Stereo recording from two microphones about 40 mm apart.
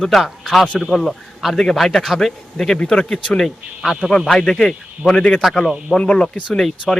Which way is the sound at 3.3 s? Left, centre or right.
Centre.